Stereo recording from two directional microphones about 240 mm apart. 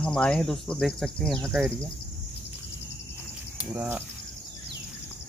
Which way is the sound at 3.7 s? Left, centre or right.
Centre.